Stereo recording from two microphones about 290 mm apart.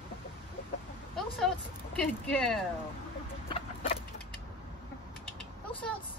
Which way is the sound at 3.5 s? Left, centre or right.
Left.